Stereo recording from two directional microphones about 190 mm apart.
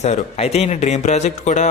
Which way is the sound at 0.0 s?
35° left (ahead or behind).